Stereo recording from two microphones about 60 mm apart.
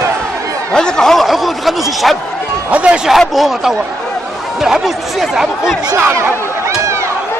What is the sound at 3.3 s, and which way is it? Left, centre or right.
Speech, centre.